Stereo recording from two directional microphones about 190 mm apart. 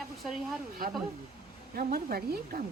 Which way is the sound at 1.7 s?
50° right (ahead or behind).